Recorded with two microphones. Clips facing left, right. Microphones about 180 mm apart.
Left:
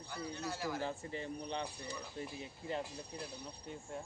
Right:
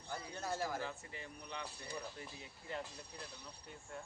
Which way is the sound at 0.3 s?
50° right (ahead or behind).